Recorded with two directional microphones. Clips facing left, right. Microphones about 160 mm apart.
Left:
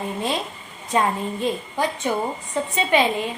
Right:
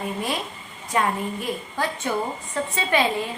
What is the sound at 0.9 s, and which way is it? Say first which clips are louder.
A woman's voice: left 2 dB; 25° left (ahead or behind).